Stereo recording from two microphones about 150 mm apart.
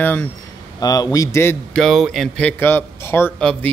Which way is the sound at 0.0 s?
15° left (ahead or behind).